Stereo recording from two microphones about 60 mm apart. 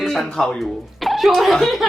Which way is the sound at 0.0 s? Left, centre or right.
Centre.